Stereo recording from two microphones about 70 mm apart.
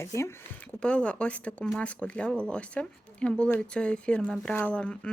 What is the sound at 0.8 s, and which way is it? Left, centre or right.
Speech, centre.